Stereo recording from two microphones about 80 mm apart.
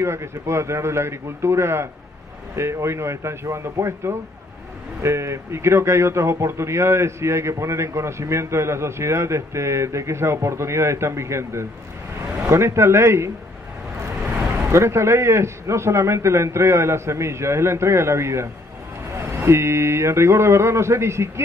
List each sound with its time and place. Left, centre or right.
0.0 s a man's voice: right
14.7 s a man's voice: right